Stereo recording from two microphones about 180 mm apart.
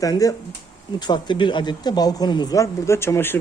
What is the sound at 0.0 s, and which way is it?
Speech, 20° left (ahead or behind).